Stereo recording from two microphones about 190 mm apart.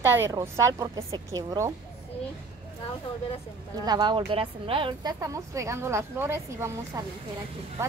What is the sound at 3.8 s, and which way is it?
A woman's voice, 20° right (ahead or behind).